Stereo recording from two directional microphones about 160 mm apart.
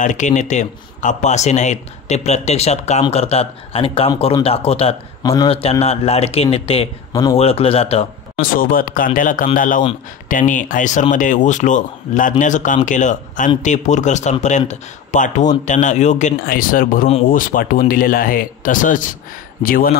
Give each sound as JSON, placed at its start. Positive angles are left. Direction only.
{"t": 0.0, "sound": "speech", "side_deg": 50}
{"t": 5.2, "sound": "speech", "side_deg": 20}
{"t": 5.5, "sound": "speech", "side_deg": 40}
{"t": 7.1, "sound": "speech", "side_deg": 20}
{"t": 7.3, "sound": "speech", "side_deg": 40}
{"t": 8.4, "sound": "speech", "side_deg": 60}